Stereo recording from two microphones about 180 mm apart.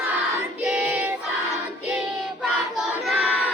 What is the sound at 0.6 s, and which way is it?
Choir, 5° right (ahead or behind).